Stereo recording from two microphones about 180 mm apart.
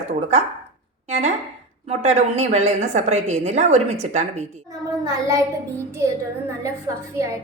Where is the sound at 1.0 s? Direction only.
35° right (ahead or behind).